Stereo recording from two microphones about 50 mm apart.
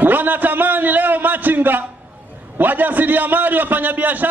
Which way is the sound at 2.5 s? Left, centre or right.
Right.